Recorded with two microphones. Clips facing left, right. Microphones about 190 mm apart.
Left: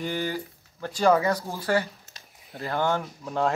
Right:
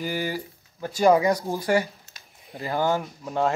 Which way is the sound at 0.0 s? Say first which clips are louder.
Right 1 dB; 10° right (ahead or behind).